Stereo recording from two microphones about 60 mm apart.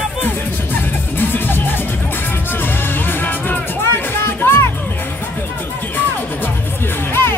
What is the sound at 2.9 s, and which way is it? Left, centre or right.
Music, left.